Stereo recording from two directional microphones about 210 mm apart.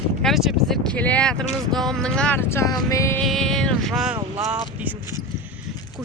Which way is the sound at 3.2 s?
Centre (ahead or behind).